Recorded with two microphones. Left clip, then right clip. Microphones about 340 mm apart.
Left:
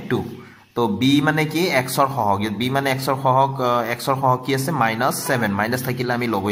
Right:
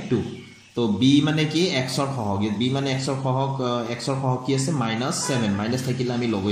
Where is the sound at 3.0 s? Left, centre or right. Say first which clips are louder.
Left 8 dB; left.